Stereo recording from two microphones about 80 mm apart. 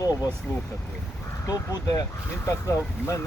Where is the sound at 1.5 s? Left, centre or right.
Left.